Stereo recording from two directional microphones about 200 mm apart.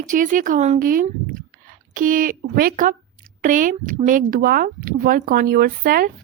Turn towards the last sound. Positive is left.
turn(degrees=-45)  # may be behind; listen again after turning